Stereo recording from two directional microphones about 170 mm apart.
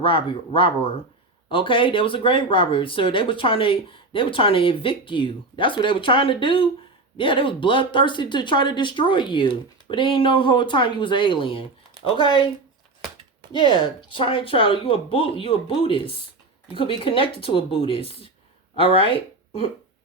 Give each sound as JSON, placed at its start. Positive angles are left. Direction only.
{"t": 0.0, "sound": "speech", "side_deg": 30}
{"t": 13.5, "sound": "speech", "side_deg": 30}